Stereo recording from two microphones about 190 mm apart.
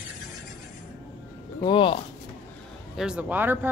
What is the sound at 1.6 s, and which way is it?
Speech, 25° left (ahead or behind).